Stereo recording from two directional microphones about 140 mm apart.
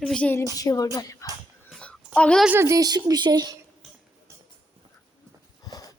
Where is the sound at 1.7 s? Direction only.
5° left (ahead or behind).